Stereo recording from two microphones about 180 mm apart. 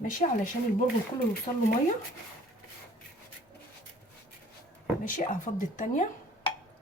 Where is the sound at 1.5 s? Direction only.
30° left (ahead or behind).